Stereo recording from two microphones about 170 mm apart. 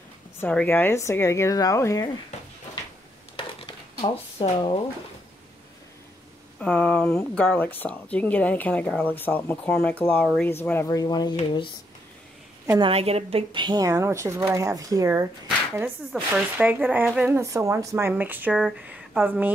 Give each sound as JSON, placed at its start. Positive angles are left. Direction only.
{"t": 0.4, "sound": "speech", "side_deg": 10}
{"t": 3.3, "sound": "a sound", "side_deg": 30}
{"t": 6.6, "sound": "speech", "side_deg": 10}
{"t": 12.6, "sound": "a woman's voice", "side_deg": -20}
{"t": 12.9, "sound": "speech", "side_deg": -35}
{"t": 15.7, "sound": "speech", "side_deg": -5}